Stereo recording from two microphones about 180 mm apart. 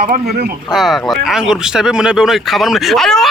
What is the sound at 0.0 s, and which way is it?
Speech, 60° right (ahead or behind).